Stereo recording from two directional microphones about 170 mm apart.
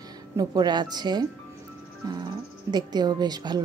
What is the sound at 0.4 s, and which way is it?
A woman's voice, 25° right (ahead or behind).